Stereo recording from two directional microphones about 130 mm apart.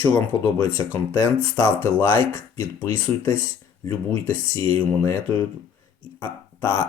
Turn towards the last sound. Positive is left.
turn(degrees=15)  # may be behind; listen again after turning